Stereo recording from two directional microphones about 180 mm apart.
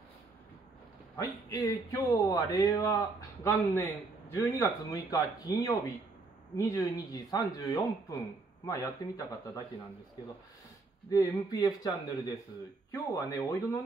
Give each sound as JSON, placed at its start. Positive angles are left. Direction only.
{"t": 1.1, "sound": "a man's voice", "side_deg": 20}
{"t": 11.1, "sound": "a man's voice", "side_deg": 20}